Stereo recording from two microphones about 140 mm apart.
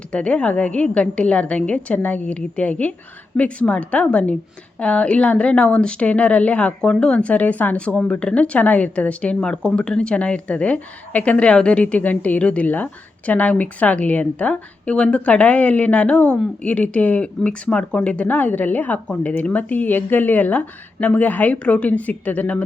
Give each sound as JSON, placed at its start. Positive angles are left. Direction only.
{"t": 0.1, "sound": "a woman's voice", "side_deg": 5}